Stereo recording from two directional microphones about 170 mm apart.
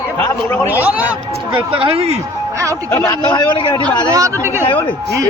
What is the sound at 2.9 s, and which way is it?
Speech, 15° left (ahead or behind).